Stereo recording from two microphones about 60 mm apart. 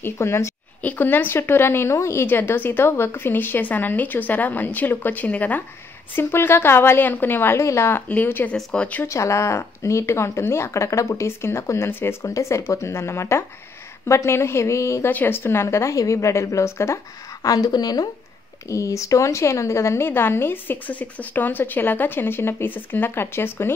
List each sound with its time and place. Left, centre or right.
0.0 s speech: left
0.8 s a woman's voice: left
2.2 s a woman's voice: left
6.1 s a woman's voice: left
7.5 s speech: left
8.1 s a woman's voice: left
9.0 s speech: left
12.2 s speech: left
15.0 s speech: left
17.4 s a woman's voice: left
18.7 s speech: left
20.1 s a woman's voice: left